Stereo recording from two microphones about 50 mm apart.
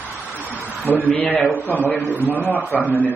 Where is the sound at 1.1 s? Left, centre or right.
Left.